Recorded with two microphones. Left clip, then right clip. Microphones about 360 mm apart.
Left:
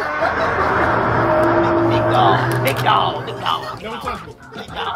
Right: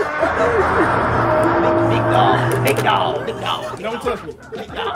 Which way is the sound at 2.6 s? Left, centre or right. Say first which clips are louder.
Even; left.